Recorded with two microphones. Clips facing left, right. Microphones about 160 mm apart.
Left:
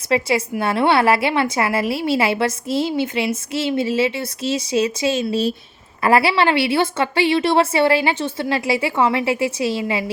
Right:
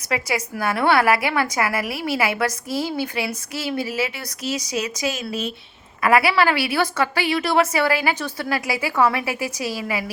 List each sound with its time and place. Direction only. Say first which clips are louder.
0.1 s a woman's voice: left 6 dB; 30° left (ahead or behind)